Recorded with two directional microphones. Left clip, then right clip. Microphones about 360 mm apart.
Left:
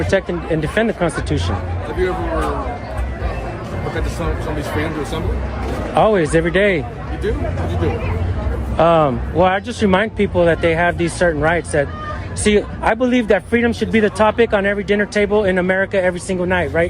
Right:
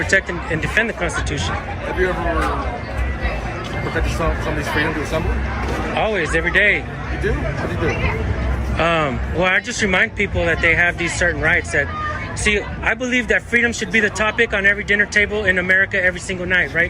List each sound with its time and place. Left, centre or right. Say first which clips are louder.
0.1 s speech: left 1 dB; centre
6.0 s speech: left 6 dB; centre
8.8 s speech: left 5 dB; centre